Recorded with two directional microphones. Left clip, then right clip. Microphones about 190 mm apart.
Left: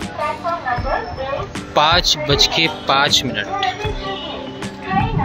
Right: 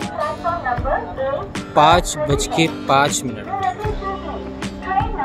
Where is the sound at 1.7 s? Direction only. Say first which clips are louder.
Right 1 dB; 10° right (ahead or behind).